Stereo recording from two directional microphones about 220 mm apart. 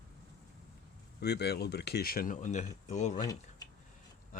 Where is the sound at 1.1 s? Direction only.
50° left (ahead or behind); by 3.2 s 30° left (ahead or behind).